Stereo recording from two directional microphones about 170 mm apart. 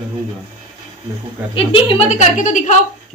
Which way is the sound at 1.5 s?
35° left (ahead or behind).